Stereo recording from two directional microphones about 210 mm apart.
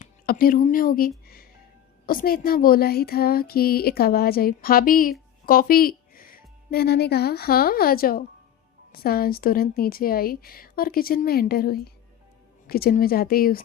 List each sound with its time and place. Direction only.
0.0 s a woman's voice: 45° left (ahead or behind)